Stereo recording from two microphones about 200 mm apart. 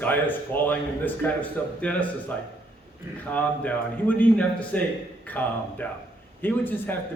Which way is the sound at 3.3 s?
5° left (ahead or behind).